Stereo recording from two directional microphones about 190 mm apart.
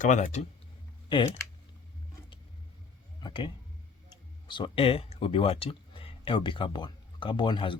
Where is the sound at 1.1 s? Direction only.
25° left (ahead or behind).